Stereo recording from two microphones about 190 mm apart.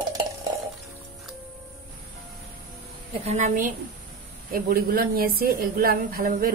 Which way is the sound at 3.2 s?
40° right (ahead or behind).